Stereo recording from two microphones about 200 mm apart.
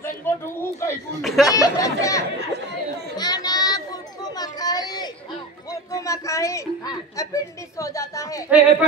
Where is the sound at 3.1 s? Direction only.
20° left (ahead or behind).